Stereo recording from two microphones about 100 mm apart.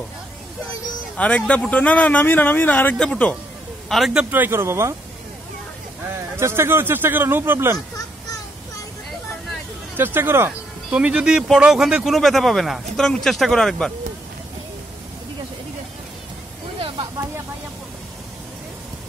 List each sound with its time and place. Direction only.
1.1 s speech: 10° left (ahead or behind)
4.2 s speech: 20° right (ahead or behind)
6.1 s speech: 25° right (ahead or behind)
9.9 s speech: 20° right (ahead or behind)
10.9 s speech: 10° right (ahead or behind); by 13.9 s 5° left (ahead or behind)
16.8 s a sound: 55° right (ahead or behind)